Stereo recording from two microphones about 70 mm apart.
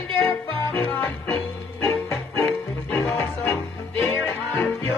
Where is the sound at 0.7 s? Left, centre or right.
Left.